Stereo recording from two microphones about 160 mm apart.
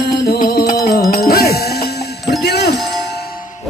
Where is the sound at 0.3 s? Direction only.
85° left.